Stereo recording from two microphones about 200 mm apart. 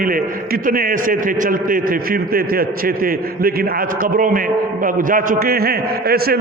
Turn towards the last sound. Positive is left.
turn(degrees=-50)  # may be behind; listen again after turning